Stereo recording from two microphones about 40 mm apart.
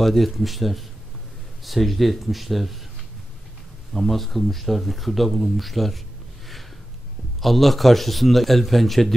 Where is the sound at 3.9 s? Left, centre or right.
Centre.